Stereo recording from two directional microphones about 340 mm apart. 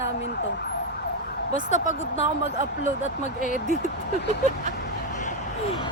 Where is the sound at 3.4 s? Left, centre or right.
Left.